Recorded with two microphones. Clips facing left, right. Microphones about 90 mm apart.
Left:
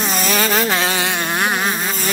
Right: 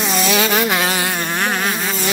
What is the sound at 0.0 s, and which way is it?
Insect, 40° left (ahead or behind).